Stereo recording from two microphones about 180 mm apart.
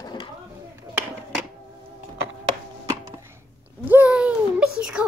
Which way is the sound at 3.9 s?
10° right (ahead or behind).